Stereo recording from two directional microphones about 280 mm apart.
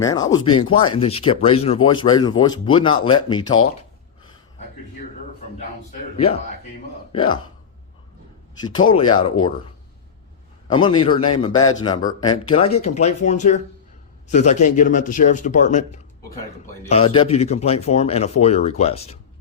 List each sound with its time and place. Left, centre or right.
0.0 s speech: centre
7.1 s speech: centre
8.9 s speech: centre
10.7 s speech: centre